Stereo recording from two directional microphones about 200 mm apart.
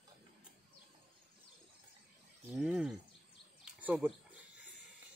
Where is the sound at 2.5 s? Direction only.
5° right (ahead or behind).